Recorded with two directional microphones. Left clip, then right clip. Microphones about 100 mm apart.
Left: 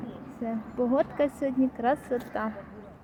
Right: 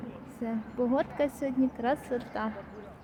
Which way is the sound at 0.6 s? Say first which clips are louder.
Left 3 dB; centre (ahead or behind).